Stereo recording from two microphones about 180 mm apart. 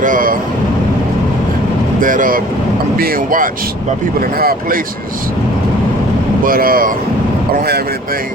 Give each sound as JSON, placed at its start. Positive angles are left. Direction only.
{"t": 0.0, "sound": "speech", "side_deg": -50}
{"t": 2.0, "sound": "speech", "side_deg": -50}
{"t": 6.4, "sound": "speech", "side_deg": -50}